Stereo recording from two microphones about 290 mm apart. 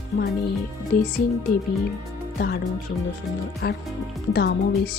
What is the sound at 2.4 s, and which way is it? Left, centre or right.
Speech, left.